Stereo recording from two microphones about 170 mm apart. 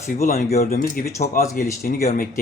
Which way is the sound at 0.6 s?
55° left (ahead or behind).